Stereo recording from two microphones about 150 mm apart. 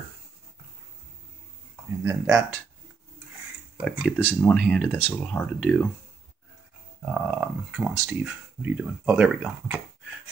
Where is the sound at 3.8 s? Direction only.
Centre (ahead or behind).